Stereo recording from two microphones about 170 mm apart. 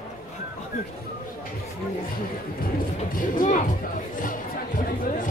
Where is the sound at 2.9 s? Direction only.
50° left (ahead or behind).